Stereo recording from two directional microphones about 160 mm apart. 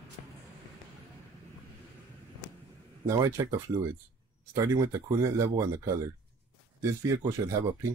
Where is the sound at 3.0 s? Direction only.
20° right (ahead or behind).